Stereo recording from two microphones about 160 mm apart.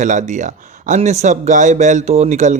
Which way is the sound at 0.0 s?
50° right (ahead or behind).